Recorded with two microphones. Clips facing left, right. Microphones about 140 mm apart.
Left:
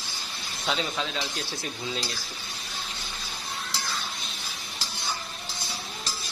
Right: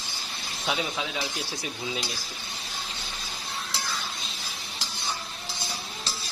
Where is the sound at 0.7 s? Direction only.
10° right (ahead or behind).